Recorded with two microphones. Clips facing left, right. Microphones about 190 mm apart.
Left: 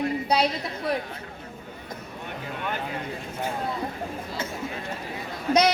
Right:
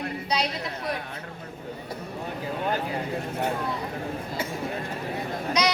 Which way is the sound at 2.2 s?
35° right (ahead or behind).